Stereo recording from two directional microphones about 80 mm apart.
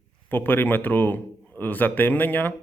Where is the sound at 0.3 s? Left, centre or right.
Left.